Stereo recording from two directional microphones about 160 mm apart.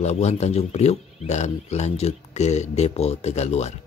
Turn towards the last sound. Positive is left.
turn(degrees=45)  # may be behind; listen again after turning